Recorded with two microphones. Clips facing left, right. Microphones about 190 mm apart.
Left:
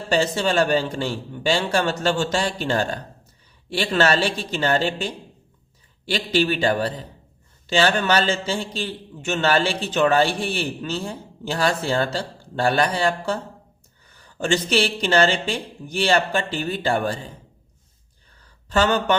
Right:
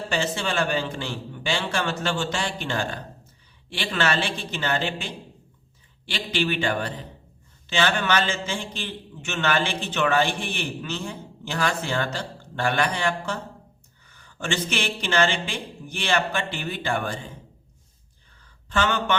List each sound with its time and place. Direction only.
0.1 s a man's voice: 40° left (ahead or behind)
14.2 s a sound: 35° left (ahead or behind)
14.7 s a man's voice: 35° left (ahead or behind)
18.7 s a man's voice: 40° left (ahead or behind)